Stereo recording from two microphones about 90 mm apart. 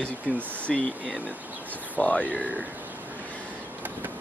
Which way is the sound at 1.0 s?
15° right (ahead or behind).